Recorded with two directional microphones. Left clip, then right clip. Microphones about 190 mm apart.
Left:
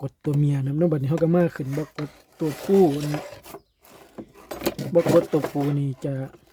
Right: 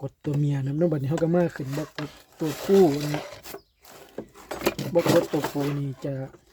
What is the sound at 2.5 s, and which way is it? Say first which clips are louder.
Speech: even; 5° right (ahead or behind).